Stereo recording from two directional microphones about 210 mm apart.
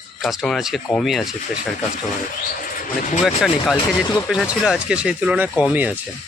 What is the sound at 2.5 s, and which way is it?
Speech, 40° left (ahead or behind).